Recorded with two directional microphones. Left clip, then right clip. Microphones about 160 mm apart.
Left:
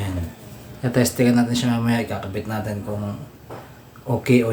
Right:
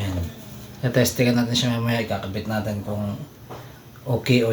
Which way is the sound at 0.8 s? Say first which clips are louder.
Left 1 dB; 25° left (ahead or behind).